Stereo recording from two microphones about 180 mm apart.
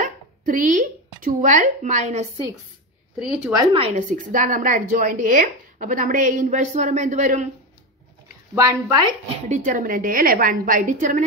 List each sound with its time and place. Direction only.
0.0 s speech: 45° right (ahead or behind)
3.2 s speech: 5° right (ahead or behind)
3.5 s a woman's voice: 30° right (ahead or behind)
8.5 s speech: 20° right (ahead or behind)
9.5 s a woman's voice: 45° right (ahead or behind)